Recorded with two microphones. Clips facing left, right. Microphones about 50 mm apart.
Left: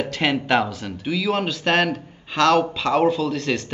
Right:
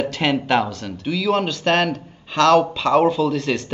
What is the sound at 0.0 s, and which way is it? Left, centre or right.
Speech, centre.